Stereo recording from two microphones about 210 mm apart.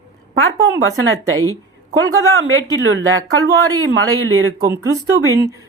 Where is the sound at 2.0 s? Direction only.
70° right (ahead or behind).